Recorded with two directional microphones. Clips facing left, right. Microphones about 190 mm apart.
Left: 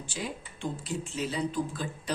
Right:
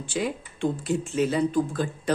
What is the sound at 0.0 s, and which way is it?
Speech, 65° right (ahead or behind).